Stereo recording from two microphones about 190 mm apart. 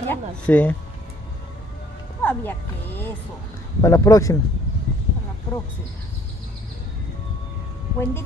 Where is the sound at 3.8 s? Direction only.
15° left (ahead or behind).